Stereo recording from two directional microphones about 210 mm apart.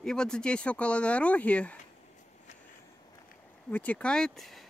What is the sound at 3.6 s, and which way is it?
Speech, 10° left (ahead or behind).